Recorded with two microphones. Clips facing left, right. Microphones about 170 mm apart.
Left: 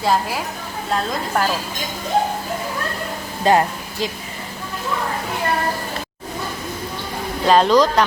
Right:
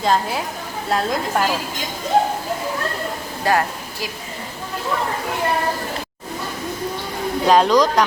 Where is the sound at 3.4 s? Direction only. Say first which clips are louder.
Left 3 dB; 20° left (ahead or behind).